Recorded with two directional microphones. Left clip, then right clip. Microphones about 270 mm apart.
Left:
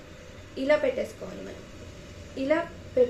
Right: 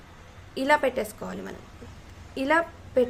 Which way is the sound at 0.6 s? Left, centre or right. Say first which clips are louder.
Right 1 dB; right.